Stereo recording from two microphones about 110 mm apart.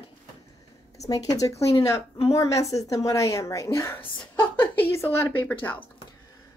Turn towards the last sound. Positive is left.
turn(degrees=15)  # may be behind; listen again after turning